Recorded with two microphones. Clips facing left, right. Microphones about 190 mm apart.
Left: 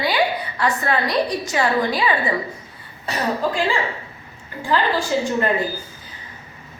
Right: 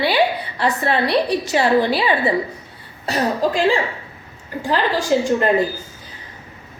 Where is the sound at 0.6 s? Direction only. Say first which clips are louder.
Right 3 dB; 30° right (ahead or behind).